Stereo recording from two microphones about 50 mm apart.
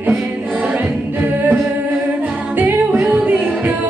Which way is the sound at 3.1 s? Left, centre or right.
Right.